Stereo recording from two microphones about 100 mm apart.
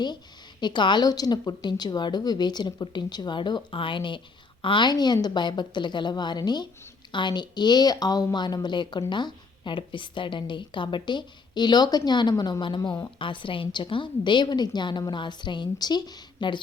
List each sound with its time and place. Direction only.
0.6 s a woman's voice: 50° left (ahead or behind)